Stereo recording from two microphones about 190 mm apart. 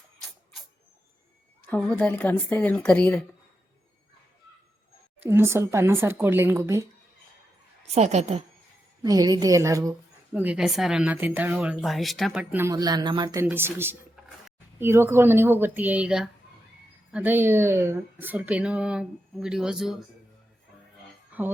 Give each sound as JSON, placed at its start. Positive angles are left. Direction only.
{"t": 1.6, "sound": "speech", "side_deg": 5}
{"t": 5.2, "sound": "speech", "side_deg": -10}
{"t": 7.9, "sound": "a woman's voice", "side_deg": -35}
{"t": 9.0, "sound": "a woman's voice", "side_deg": -20}